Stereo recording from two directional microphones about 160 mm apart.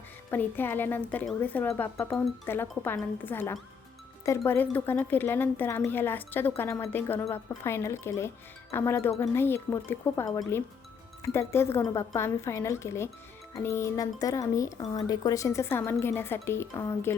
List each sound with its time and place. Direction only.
0.3 s a woman's voice: 10° left (ahead or behind)